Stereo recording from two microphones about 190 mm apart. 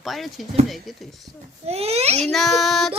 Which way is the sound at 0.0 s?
Centre (ahead or behind).